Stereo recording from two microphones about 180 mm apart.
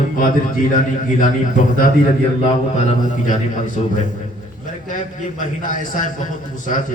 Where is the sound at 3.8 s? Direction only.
40° left (ahead or behind).